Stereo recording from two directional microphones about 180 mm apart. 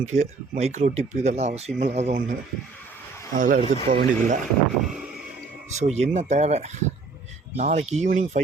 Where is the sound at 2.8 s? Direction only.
10° left (ahead or behind).